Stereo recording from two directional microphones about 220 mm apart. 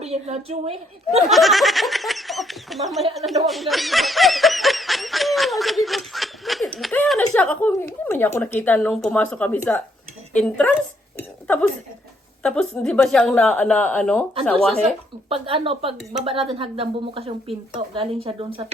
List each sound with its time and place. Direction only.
0.0 s speech: 30° right (ahead or behind)
1.3 s speech: centre (ahead or behind)
11.2 s a sound: 10° left (ahead or behind)
12.4 s speech: 5° left (ahead or behind)
15.3 s speech: 25° right (ahead or behind)